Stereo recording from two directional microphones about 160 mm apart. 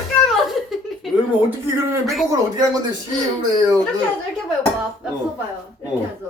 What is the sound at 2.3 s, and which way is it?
Speech, 20° right (ahead or behind).